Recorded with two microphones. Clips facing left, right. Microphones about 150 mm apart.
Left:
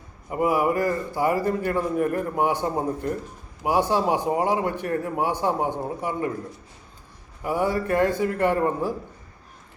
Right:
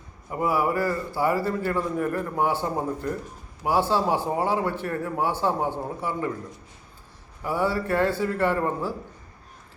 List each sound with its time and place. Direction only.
0.3 s a man's voice: 15° left (ahead or behind)
7.4 s a man's voice: 15° left (ahead or behind)